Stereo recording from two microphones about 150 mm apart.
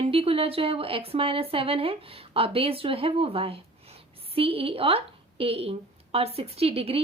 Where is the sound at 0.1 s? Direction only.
40° right (ahead or behind).